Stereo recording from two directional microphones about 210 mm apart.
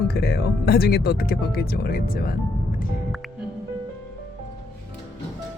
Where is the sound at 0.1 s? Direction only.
50° left (ahead or behind).